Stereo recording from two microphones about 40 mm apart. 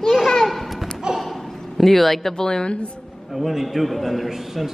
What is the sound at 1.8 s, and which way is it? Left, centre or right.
Speech, centre.